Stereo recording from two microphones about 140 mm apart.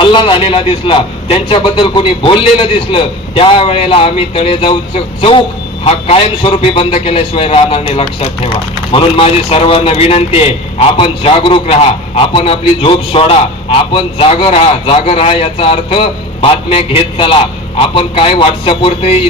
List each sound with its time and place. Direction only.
0.0 s a man's voice: 35° left (ahead or behind)